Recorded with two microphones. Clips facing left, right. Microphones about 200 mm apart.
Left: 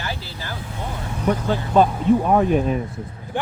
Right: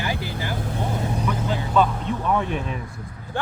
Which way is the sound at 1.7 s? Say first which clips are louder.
Left 6 dB; 40° left (ahead or behind).